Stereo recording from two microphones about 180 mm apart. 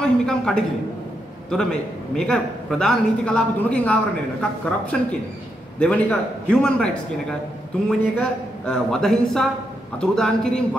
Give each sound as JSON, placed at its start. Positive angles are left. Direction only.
{"t": 0.0, "sound": "a sound", "side_deg": 5}
{"t": 1.5, "sound": "a man's voice", "side_deg": 5}
{"t": 5.8, "sound": "a man's voice", "side_deg": 5}
{"t": 7.9, "sound": "a man's voice", "side_deg": 5}